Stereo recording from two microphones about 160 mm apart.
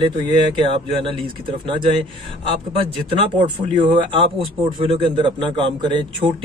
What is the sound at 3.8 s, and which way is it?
A man's voice, 35° right (ahead or behind).